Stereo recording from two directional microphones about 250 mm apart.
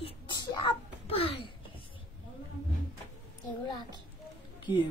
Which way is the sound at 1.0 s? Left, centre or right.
Left.